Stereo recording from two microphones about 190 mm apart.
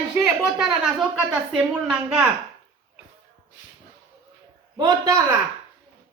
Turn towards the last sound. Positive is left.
turn(degrees=-20)  # may be behind; listen again after turning